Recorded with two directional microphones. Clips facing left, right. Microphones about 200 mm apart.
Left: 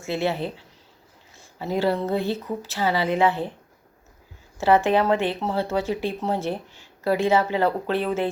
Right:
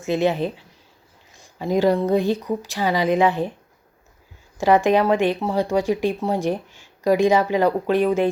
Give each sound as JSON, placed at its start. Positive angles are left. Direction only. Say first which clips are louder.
{"t": 0.0, "sound": "speech", "louder": "right 5 dB", "side_deg": -15}
{"t": 4.5, "sound": "speech", "louder": "right 2 dB", "side_deg": -15}